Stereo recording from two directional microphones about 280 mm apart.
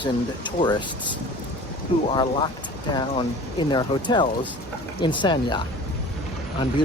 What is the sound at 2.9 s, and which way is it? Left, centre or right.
Speech, centre.